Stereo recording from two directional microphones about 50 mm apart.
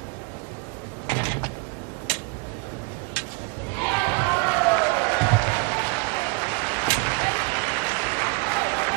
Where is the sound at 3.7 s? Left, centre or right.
Left.